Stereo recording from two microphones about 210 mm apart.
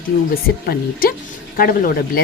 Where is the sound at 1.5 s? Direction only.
45° left (ahead or behind).